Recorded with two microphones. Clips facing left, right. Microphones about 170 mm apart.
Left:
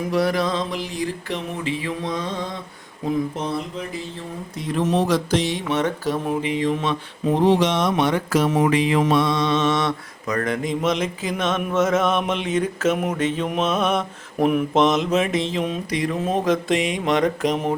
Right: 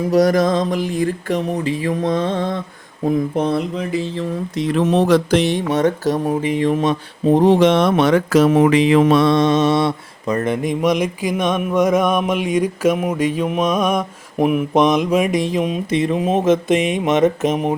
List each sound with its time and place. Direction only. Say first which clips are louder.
0.1 s a sound: right 7 dB; 40° right (ahead or behind)
3.3 s music: right 8 dB; 60° right (ahead or behind)
4.5 s music: right 4 dB; 85° right; by 5.5 s 60° right (ahead or behind)
5.6 s a sound: right 5 dB; 40° right (ahead or behind)
7.3 s music: right 5 dB; 45° right (ahead or behind); by 10.6 s 25° right (ahead or behind)
10.7 s mantra: right 5 dB; 15° right (ahead or behind)